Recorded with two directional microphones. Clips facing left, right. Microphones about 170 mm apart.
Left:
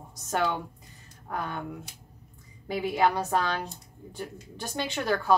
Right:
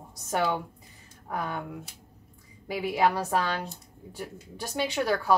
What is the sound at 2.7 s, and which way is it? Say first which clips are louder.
Speech: even; 10° right (ahead or behind).